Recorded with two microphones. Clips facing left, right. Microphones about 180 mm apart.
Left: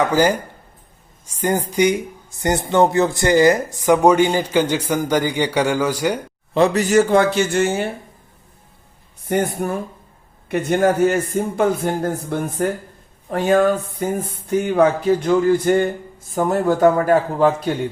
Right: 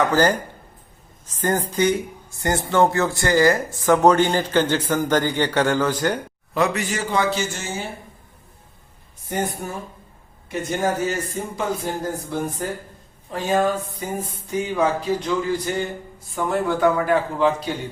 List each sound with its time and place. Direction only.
0.0 s speech: 10° left (ahead or behind)
1.4 s speech: 10° left (ahead or behind)
6.5 s a man's voice: 30° left (ahead or behind)
6.8 s a man's voice: 45° left (ahead or behind)
9.2 s a man's voice: 60° left (ahead or behind)